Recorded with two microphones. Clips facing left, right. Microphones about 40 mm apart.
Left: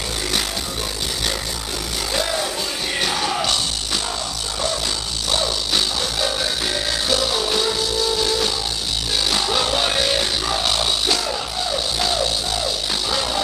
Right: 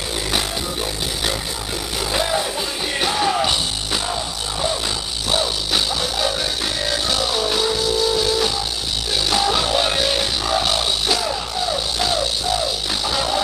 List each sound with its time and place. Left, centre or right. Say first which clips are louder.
2.1 s music: right 2 dB; centre
5.3 s music: right 1 dB; centre